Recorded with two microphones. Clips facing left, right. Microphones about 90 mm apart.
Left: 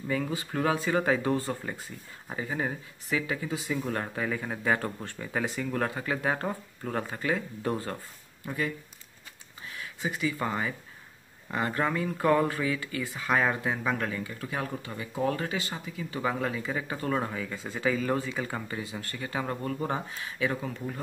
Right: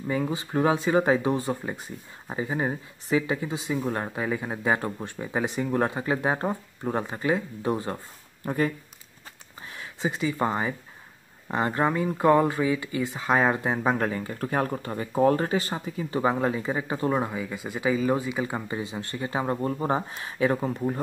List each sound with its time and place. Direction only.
0.1 s speech: 25° right (ahead or behind)
8.5 s speech: 45° right (ahead or behind)
9.8 s speech: 25° right (ahead or behind)